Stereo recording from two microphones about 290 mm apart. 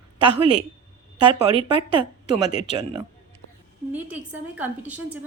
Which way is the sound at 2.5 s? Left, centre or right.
Left.